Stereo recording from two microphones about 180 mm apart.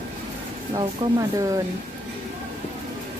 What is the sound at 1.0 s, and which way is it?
Speech, 30° right (ahead or behind).